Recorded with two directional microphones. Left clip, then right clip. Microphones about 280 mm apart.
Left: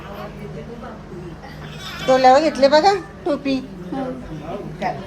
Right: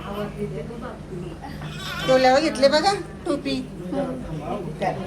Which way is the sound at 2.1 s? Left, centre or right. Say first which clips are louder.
Left 5 dB; left.